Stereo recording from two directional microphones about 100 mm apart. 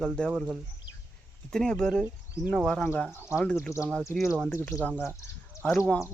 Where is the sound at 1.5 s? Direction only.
10° left (ahead or behind).